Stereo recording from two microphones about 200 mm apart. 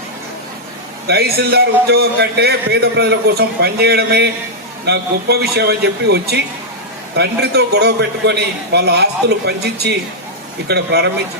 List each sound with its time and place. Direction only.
1.0 s a man's voice: 50° right (ahead or behind)